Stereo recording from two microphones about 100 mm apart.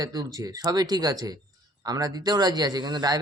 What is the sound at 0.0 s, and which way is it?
A man's voice, 40° right (ahead or behind).